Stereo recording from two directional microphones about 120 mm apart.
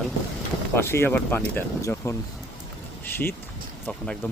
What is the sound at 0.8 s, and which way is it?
Speech, 20° left (ahead or behind).